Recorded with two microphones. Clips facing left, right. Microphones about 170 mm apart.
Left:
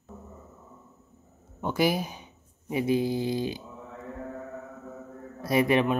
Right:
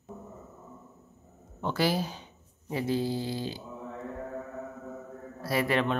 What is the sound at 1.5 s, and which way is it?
Speech, 15° left (ahead or behind).